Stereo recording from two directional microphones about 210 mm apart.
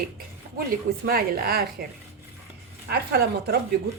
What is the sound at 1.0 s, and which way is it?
Speech, 45° right (ahead or behind).